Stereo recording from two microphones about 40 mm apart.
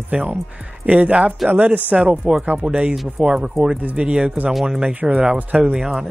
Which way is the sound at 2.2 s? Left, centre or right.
Centre.